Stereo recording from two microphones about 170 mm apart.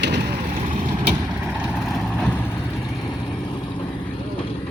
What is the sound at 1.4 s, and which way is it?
Vehicle, 5° right (ahead or behind).